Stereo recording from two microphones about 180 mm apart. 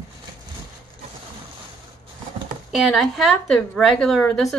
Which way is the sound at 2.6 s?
Centre (ahead or behind).